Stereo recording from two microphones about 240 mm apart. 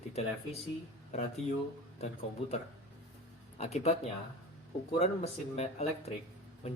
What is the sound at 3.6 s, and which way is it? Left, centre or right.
Speech, left.